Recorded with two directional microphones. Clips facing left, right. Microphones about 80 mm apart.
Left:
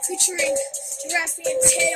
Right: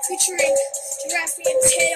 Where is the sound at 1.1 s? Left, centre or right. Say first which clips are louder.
Right 3 dB; left.